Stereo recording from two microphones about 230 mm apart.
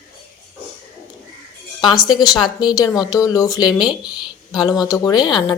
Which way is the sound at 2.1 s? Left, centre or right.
Centre.